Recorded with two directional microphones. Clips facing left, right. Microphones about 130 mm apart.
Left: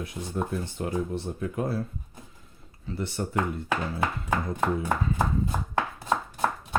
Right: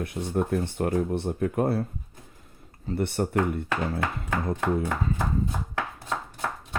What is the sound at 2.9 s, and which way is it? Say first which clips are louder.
Speech: right 4 dB; 60° right (ahead or behind).